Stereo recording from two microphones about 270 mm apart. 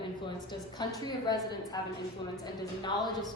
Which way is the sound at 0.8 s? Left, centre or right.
Centre.